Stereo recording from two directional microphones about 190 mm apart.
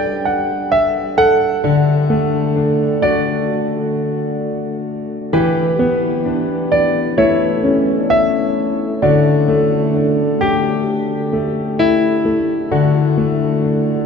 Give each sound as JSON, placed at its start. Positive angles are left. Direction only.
{"t": 0.7, "sound": "music", "side_deg": 0}
{"t": 5.3, "sound": "music", "side_deg": 0}
{"t": 11.8, "sound": "music", "side_deg": 0}